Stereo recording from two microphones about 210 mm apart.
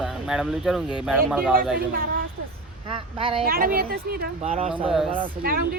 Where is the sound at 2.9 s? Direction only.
25° right (ahead or behind).